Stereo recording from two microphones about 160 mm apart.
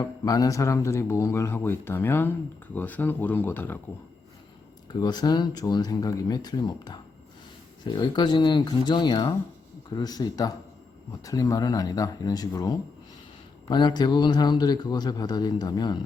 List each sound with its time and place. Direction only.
0.0 s speech: 25° left (ahead or behind)
4.9 s a man's voice: 25° left (ahead or behind)